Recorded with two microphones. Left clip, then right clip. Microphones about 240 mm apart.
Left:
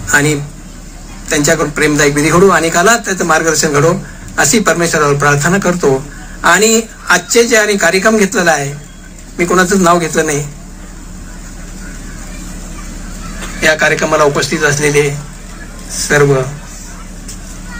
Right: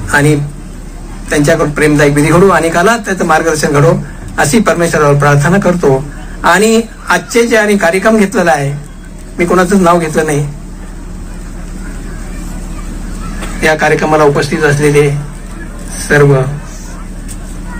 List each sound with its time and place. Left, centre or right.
0.0 s a man's voice: left
13.6 s a man's voice: left